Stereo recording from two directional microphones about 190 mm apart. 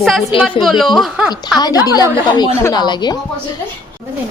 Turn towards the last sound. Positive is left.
turn(degrees=20)  # may be behind; listen again after turning